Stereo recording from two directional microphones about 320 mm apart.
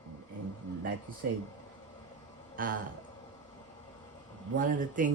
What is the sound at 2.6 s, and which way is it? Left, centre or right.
Speech, right.